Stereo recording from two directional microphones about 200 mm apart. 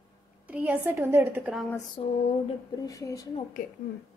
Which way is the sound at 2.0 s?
25° left (ahead or behind).